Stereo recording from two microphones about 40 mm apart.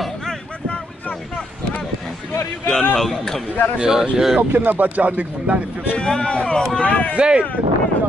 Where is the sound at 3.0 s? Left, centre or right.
Centre.